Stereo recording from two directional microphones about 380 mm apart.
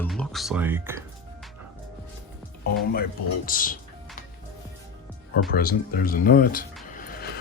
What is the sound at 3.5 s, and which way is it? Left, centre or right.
Speech, left.